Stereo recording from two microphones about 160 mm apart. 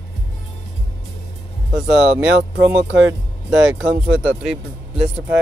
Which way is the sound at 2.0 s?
90° right.